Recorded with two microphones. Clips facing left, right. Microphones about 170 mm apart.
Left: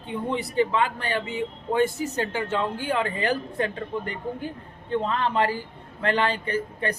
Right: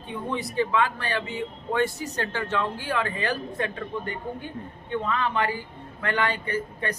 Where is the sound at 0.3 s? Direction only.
25° left (ahead or behind).